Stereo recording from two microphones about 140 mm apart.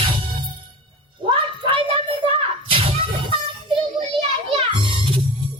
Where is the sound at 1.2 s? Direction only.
35° right (ahead or behind).